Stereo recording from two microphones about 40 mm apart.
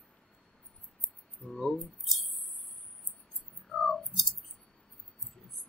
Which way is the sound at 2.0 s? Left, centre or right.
Centre.